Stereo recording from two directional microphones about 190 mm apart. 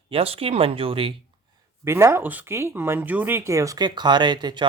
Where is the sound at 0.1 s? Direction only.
30° right (ahead or behind).